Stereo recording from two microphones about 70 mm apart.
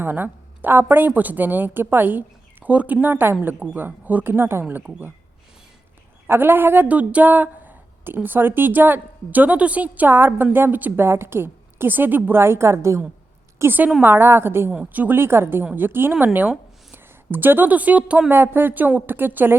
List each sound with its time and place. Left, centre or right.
0.0 s speech: right
6.2 s speech: right
13.6 s speech: right
14.7 s speech: centre
18.3 s speech: right